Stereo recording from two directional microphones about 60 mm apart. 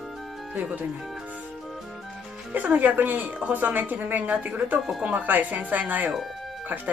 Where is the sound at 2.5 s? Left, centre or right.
Right.